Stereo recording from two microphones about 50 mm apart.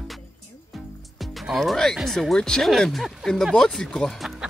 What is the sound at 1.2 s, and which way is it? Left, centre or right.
Speech, centre.